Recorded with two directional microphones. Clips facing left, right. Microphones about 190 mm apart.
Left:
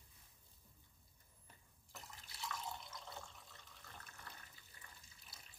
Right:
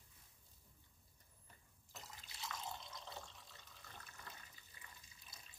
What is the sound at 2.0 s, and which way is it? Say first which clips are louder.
Water: left 1 dB; 20° right (ahead or behind).